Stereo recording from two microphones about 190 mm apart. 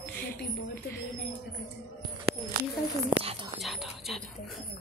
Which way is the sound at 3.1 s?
30° right (ahead or behind).